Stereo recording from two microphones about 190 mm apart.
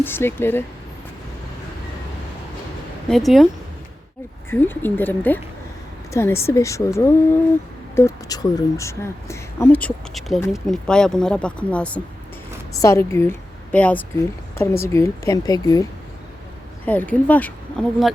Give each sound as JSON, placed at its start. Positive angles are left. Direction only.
{"t": 0.0, "sound": "a woman's voice", "side_deg": 10}
{"t": 3.1, "sound": "speech", "side_deg": 0}
{"t": 4.4, "sound": "a woman's voice", "side_deg": 10}
{"t": 16.8, "sound": "a woman's voice", "side_deg": 10}